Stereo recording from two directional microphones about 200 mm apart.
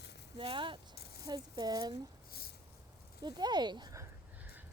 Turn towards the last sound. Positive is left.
turn(degrees=-20)  # may be behind; listen again after turning